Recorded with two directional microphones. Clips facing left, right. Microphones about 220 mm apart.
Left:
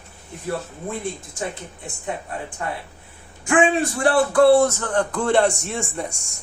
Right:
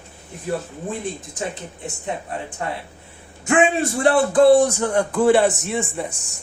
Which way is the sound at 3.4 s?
25° right (ahead or behind).